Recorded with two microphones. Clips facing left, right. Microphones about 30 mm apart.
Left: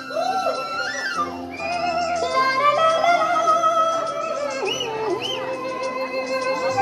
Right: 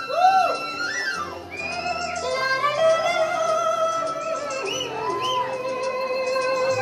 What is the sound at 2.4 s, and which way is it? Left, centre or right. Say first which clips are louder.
Music: left 4 dB; centre.